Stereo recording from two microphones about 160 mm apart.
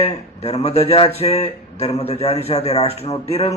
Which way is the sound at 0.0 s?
40° left (ahead or behind).